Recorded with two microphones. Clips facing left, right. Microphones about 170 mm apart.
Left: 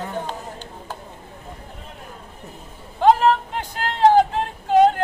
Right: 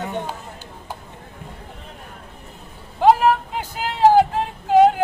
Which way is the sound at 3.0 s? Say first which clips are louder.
Right 1 dB; 10° right (ahead or behind).